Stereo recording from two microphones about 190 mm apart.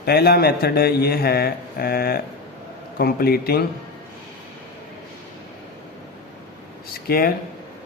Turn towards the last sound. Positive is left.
turn(degrees=50)  # may be behind; listen again after turning